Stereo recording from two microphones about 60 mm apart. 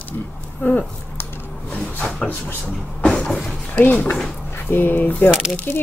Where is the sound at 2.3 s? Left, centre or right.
Left.